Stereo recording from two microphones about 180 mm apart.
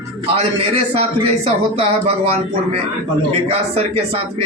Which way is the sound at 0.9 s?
35° right (ahead or behind).